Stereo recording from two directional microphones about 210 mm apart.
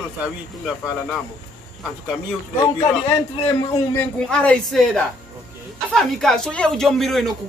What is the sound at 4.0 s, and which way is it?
Speech, 5° left (ahead or behind).